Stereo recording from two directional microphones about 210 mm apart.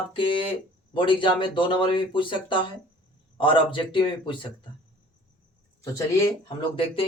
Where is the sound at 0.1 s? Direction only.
25° left (ahead or behind).